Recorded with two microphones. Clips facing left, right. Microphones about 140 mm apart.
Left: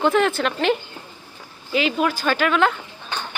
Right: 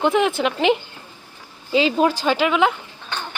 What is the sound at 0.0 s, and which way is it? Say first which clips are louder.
Speech: even; 15° right (ahead or behind).